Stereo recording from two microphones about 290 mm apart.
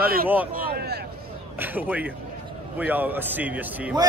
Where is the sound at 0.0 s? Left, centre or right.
Right.